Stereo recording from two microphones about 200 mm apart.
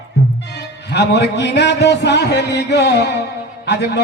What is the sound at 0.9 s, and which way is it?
A man's voice, 60° left (ahead or behind).